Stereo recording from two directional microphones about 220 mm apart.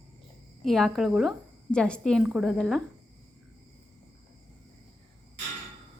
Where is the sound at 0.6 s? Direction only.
Centre (ahead or behind).